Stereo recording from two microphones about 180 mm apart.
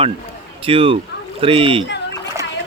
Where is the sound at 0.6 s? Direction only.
30° right (ahead or behind).